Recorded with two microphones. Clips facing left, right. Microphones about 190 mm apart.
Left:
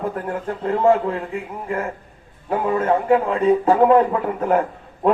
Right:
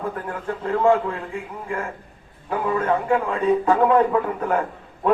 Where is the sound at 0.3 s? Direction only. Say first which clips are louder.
Left 2 dB; 30° left (ahead or behind).